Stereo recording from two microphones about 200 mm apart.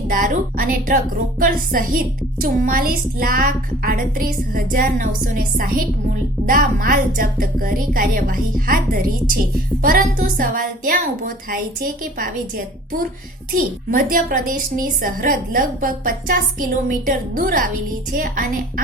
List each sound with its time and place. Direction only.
0.1 s a woman's voice: 45° right (ahead or behind)